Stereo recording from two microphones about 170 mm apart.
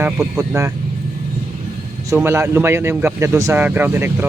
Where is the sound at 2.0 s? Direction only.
15° right (ahead or behind).